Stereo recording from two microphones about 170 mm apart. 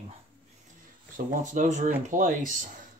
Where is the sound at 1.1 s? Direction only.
50° right (ahead or behind).